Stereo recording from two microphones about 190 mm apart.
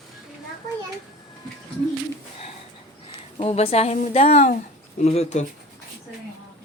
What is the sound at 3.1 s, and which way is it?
A woman's voice, 30° left (ahead or behind).